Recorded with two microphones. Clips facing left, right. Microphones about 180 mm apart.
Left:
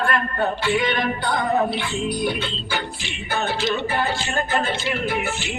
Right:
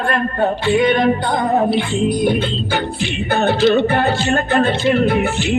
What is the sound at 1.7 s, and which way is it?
Music, 45° right (ahead or behind).